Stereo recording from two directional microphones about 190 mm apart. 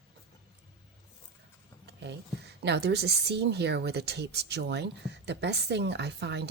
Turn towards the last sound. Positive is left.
turn(degrees=-60)  # may be behind; listen again after turning